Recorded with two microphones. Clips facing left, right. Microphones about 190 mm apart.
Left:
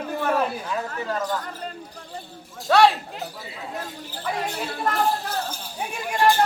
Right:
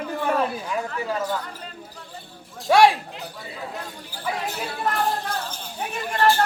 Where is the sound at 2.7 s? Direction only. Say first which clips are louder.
Right 1 dB; 10° right (ahead or behind).